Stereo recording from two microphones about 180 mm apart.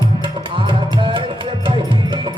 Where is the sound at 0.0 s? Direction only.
25° right (ahead or behind).